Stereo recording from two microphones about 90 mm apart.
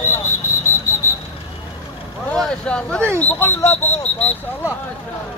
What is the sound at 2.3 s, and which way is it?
Vehicle, 10° left (ahead or behind).